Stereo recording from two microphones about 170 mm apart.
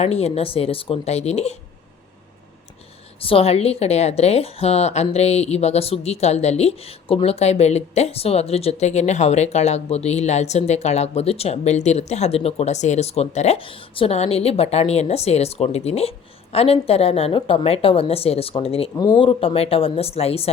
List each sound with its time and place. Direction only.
0.0 s a woman's voice: 40° left (ahead or behind)
3.2 s a woman's voice: 35° left (ahead or behind)